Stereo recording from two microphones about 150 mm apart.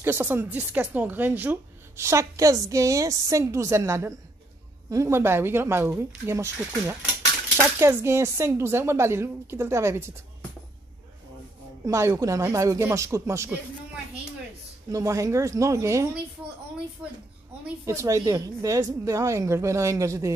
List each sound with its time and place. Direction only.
0.0 s speech: 15° right (ahead or behind)
11.8 s a woman's voice: 20° right (ahead or behind)
14.9 s a woman's voice: 20° right (ahead or behind)